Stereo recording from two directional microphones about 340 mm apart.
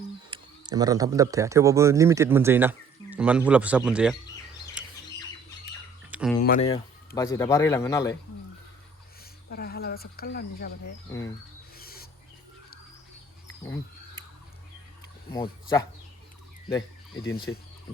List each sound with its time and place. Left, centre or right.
0.3 s speech: centre
6.1 s a sound: centre
6.4 s speech: left
9.5 s speech: left
11.8 s owl: left
15.3 s speech: centre
17.5 s speech: left